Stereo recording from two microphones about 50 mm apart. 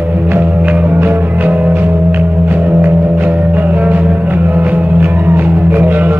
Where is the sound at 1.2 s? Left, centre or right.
Right.